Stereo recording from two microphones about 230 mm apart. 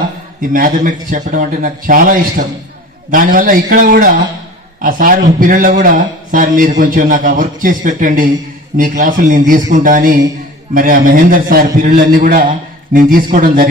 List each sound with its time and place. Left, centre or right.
0.4 s a man's voice: right